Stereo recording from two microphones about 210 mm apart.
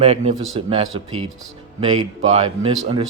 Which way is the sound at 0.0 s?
30° right (ahead or behind).